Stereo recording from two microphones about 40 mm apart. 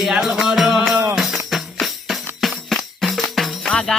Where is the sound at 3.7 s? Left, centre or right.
Centre.